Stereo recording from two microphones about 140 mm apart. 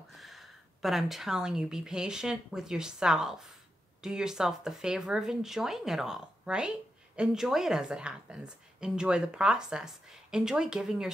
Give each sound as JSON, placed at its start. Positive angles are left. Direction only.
{"t": 0.1, "sound": "a woman's voice", "side_deg": 0}